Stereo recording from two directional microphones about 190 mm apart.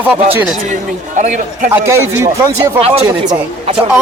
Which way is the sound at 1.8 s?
15° right (ahead or behind).